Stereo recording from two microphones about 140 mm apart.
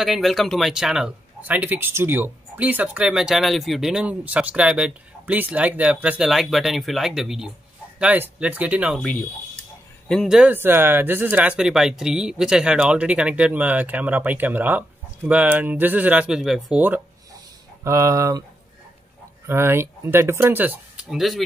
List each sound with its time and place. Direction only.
0.0 s speech: centre (ahead or behind)
10.0 s speech: centre (ahead or behind)
17.8 s speech: 20° right (ahead or behind)
19.4 s speech: 15° right (ahead or behind)